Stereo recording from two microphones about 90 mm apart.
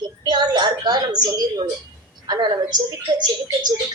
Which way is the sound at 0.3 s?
50° right (ahead or behind).